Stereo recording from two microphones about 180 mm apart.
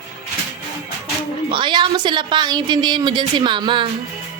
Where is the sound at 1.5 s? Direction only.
25° right (ahead or behind).